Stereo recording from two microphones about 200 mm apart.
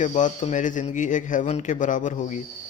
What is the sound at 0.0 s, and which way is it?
Speech, 40° left (ahead or behind).